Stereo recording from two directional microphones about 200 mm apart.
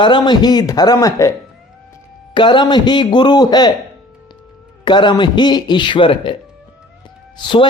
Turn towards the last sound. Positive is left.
turn(degrees=25)  # may be behind; listen again after turning